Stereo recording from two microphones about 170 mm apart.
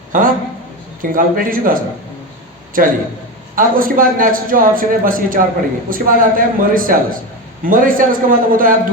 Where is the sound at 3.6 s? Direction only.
55° right (ahead or behind).